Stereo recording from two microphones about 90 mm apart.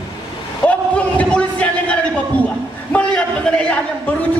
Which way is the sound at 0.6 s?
15° left (ahead or behind).